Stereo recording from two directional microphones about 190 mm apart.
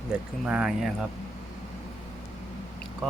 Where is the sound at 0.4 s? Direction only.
5° right (ahead or behind).